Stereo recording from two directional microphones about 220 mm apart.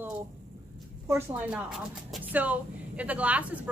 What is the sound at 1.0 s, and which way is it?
A woman's voice, 10° right (ahead or behind).